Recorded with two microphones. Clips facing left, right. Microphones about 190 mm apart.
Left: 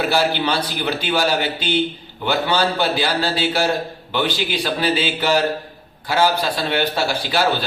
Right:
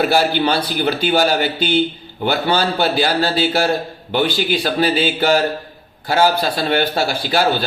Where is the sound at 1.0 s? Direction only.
45° right (ahead or behind).